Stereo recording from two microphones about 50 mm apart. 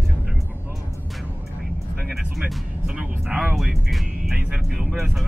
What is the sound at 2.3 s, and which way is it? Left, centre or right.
Music, centre.